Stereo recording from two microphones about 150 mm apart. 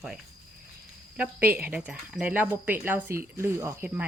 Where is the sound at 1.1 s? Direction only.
10° right (ahead or behind).